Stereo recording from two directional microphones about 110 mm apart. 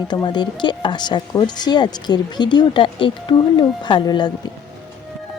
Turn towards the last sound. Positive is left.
turn(degrees=45)  # may be behind; listen again after turning